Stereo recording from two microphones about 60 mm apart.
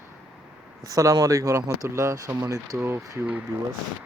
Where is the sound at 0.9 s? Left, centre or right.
Right.